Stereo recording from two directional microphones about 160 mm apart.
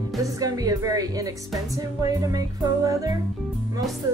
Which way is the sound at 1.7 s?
20° right (ahead or behind).